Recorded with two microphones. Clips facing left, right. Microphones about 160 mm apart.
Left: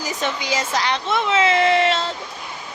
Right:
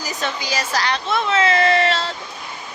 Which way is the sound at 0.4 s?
25° left (ahead or behind).